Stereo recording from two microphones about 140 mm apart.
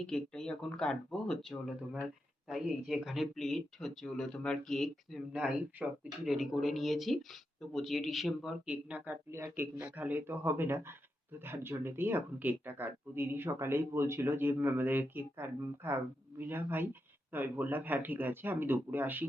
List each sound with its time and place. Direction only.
0.0 s speech: 5° left (ahead or behind); by 19.2 s 15° right (ahead or behind)